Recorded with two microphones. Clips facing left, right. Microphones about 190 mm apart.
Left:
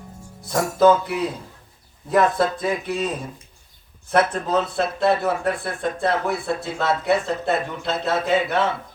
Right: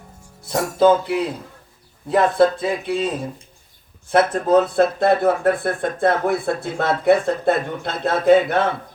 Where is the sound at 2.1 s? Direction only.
25° right (ahead or behind).